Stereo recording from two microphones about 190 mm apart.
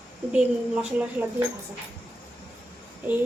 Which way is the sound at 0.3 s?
5° right (ahead or behind).